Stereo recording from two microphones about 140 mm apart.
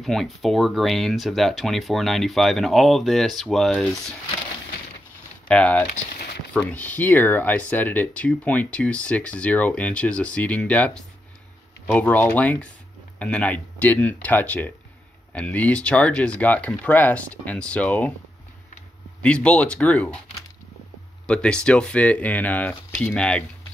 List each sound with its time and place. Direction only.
0.0 s speech: centre (ahead or behind)
5.5 s speech: 10° left (ahead or behind)
11.9 s speech: 10° left (ahead or behind)
19.2 s speech: 10° left (ahead or behind)
21.3 s speech: 5° left (ahead or behind)